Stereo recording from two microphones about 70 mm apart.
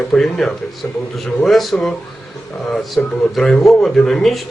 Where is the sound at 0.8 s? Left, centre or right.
Left.